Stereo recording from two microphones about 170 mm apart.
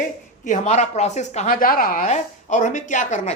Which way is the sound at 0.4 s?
45° left (ahead or behind).